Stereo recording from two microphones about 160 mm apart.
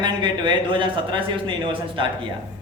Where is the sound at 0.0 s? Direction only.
30° right (ahead or behind).